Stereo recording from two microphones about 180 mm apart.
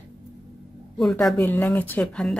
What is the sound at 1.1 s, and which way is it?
Speech, 10° left (ahead or behind).